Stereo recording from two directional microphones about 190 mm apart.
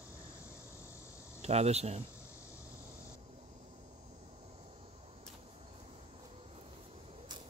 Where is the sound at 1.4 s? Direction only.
35° right (ahead or behind).